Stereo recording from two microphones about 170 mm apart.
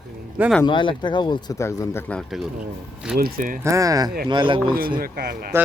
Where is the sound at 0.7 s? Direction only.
30° left (ahead or behind); by 2.2 s 10° left (ahead or behind).